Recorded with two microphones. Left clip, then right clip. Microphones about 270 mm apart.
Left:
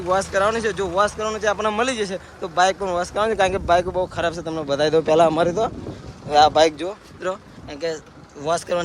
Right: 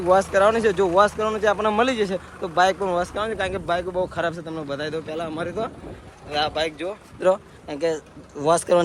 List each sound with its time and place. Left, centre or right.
0.1 s speech: centre
7.2 s speech: centre